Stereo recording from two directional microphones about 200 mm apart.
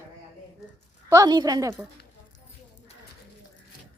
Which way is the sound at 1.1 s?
20° right (ahead or behind).